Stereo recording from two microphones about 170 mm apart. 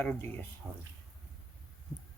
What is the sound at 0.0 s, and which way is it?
Speech, 10° left (ahead or behind).